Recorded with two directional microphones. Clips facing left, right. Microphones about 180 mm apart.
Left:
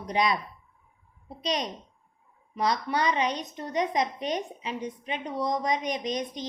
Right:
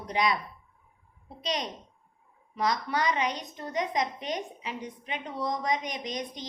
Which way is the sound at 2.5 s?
20° left (ahead or behind).